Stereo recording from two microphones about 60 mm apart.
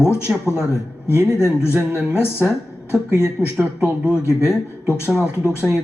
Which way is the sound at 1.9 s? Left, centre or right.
Left.